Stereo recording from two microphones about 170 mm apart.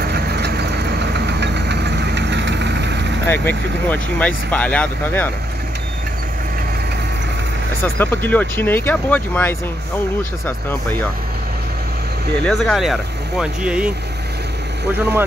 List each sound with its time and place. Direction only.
0.0 s vehicle: 75° right (ahead or behind); by 3.1 s 90° right
3.3 s speech: 10° left (ahead or behind)
7.8 s speech: 10° left (ahead or behind)
12.4 s speech: 5° left (ahead or behind)